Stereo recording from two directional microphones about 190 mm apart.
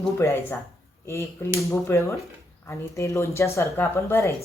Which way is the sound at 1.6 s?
15° left (ahead or behind).